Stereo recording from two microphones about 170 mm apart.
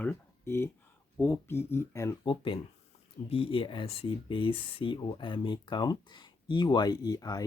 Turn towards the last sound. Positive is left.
turn(degrees=20)  # may be behind; listen again after turning